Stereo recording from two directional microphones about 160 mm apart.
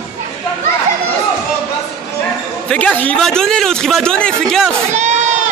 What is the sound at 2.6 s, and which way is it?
A man's voice, 10° left (ahead or behind).